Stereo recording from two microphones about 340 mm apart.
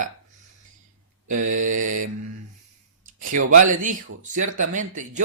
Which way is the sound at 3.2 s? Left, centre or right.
Right.